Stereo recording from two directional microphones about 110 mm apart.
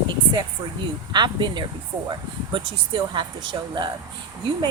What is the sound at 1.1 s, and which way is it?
A woman's voice, 45° right (ahead or behind).